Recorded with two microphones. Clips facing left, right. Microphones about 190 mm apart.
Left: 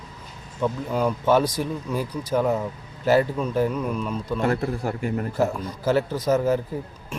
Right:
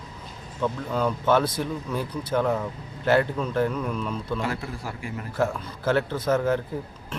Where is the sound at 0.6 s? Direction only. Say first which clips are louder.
Left 2 dB; 10° left (ahead or behind).